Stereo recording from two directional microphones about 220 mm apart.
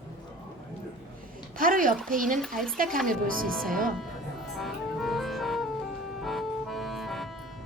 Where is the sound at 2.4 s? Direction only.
Centre (ahead or behind).